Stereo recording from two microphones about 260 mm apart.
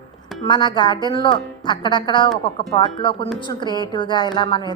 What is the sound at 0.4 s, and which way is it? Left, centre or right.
A woman's voice, centre.